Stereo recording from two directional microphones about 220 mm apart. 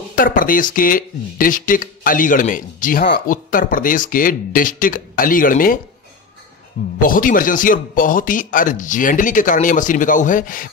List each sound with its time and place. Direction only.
0.1 s speech: 40° left (ahead or behind)
7.0 s speech: 40° left (ahead or behind)